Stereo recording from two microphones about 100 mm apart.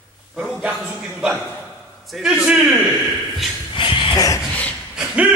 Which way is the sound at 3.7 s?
55° left (ahead or behind).